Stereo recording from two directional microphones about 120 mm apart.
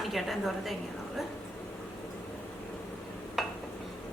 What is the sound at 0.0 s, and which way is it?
Speech, centre (ahead or behind).